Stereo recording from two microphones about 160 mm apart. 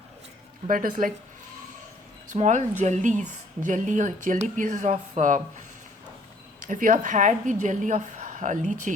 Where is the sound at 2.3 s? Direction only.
50° right (ahead or behind).